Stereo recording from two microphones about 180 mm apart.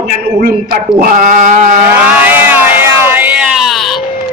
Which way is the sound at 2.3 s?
10° right (ahead or behind).